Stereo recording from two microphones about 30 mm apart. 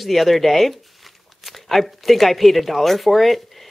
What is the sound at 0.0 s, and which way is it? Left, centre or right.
Speech, centre.